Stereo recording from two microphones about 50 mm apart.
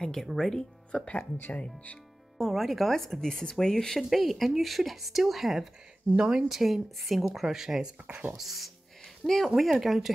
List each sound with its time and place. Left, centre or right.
0.0 s speech: centre
0.9 s speech: left
2.3 s speech: centre
4.1 s speech: centre
6.1 s speech: right
6.5 s speech: centre